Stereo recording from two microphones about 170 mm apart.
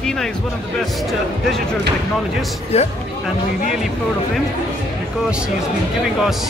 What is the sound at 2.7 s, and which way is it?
Speech, 40° left (ahead or behind).